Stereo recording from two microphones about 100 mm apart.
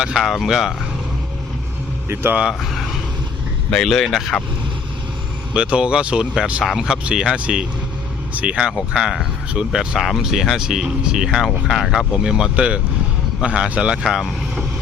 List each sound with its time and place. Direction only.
0.0 s speech: 5° right (ahead or behind)
2.0 s speech: 25° right (ahead or behind)
2.4 s speech: 5° right (ahead or behind)
5.5 s speech: 10° right (ahead or behind)